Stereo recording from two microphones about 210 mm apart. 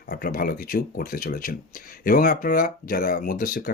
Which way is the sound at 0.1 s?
45° left (ahead or behind).